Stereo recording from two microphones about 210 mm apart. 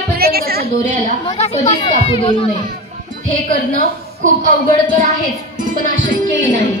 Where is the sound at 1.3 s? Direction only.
30° left (ahead or behind).